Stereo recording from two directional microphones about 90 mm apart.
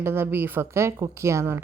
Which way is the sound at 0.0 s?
25° right (ahead or behind).